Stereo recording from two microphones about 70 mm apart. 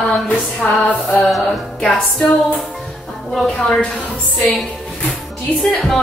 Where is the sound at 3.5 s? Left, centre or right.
Centre.